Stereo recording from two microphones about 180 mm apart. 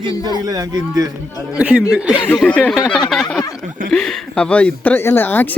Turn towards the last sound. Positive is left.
turn(degrees=10)  # may be behind; listen again after turning